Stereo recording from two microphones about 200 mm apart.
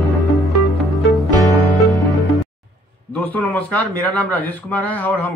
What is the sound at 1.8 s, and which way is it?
Music, 15° left (ahead or behind).